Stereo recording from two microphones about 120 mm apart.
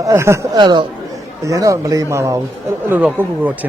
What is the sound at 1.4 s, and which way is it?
Speech, 25° right (ahead or behind).